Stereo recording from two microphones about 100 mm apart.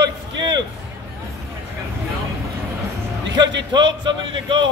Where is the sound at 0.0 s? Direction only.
45° right (ahead or behind).